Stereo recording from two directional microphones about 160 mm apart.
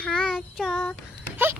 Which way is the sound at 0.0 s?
5° left (ahead or behind).